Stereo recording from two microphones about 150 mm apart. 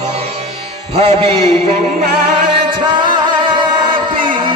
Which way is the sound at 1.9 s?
80° right.